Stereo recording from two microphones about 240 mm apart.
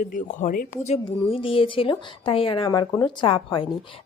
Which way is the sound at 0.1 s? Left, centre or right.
Left.